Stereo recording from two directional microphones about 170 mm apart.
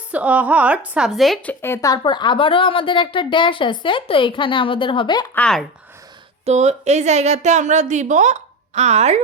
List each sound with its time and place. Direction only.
0.1 s a woman's voice: 10° right (ahead or behind)
1.6 s a woman's voice: 15° left (ahead or behind)
5.3 s speech: 5° left (ahead or behind)
6.4 s a woman's voice: 40° right (ahead or behind)